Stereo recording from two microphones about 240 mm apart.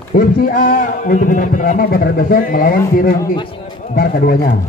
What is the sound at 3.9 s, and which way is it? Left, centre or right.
Speech, left.